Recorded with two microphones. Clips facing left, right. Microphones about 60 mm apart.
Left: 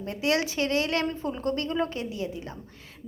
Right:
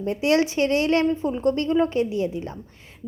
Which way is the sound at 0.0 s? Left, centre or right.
Right.